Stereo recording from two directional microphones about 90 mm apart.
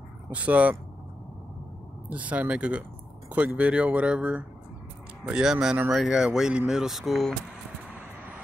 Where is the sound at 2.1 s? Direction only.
15° right (ahead or behind); by 7.3 s centre (ahead or behind).